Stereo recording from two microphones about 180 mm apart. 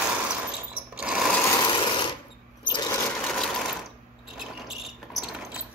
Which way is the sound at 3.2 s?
Centre (ahead or behind).